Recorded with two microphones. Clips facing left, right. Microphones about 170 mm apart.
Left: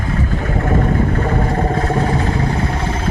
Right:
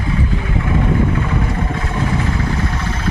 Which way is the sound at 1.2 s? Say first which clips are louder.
Left 3 dB; 45° left (ahead or behind).